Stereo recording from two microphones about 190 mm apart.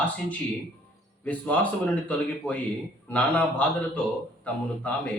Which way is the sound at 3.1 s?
5° left (ahead or behind).